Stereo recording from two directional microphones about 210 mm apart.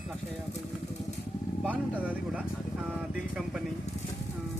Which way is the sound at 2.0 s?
5° right (ahead or behind).